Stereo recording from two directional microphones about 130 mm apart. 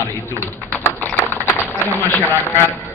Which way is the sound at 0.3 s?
15° left (ahead or behind).